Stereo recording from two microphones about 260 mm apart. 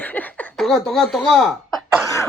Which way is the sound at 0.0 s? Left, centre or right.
Centre.